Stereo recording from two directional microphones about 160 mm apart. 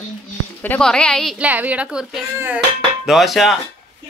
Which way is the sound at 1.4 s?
10° right (ahead or behind).